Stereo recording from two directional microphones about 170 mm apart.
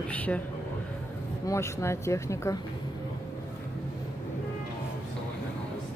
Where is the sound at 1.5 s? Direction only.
15° left (ahead or behind).